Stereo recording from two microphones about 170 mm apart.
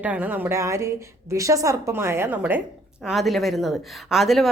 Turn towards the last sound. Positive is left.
turn(degrees=0)  # may be behind; listen again after turning